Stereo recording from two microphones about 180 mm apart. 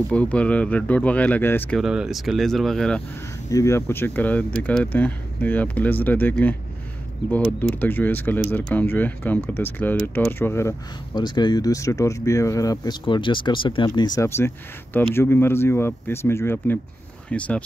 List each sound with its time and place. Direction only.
0.1 s speech: 5° left (ahead or behind)
1.8 s speech: centre (ahead or behind)
3.4 s speech: 15° left (ahead or behind)
11.1 s speech: 25° left (ahead or behind); by 17.6 s 5° left (ahead or behind)